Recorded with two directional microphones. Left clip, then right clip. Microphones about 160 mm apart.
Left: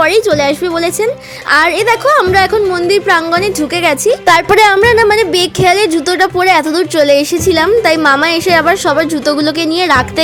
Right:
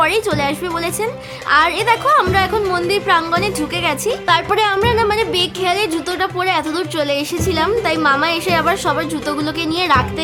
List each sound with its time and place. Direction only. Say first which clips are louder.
0.3 s speech: left 7 dB; 30° left (ahead or behind)
4.3 s speech: left 8 dB; 40° left (ahead or behind)